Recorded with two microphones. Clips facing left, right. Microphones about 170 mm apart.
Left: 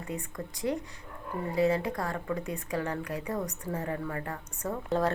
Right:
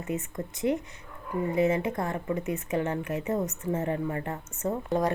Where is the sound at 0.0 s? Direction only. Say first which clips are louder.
Right 4 dB; 20° right (ahead or behind).